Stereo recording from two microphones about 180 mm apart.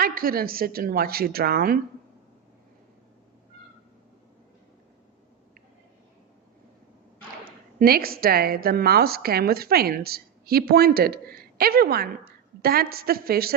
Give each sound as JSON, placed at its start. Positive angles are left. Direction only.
{"t": 0.0, "sound": "a woman's voice", "side_deg": -55}
{"t": 7.4, "sound": "a woman's voice", "side_deg": -55}